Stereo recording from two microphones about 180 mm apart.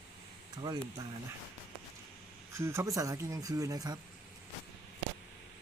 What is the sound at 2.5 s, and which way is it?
Speech, 15° right (ahead or behind).